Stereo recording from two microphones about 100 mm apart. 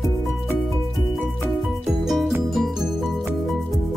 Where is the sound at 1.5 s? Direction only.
Centre (ahead or behind).